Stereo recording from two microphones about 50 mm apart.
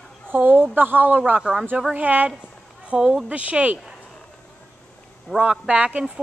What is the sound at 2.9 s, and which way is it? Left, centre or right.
Speech, centre.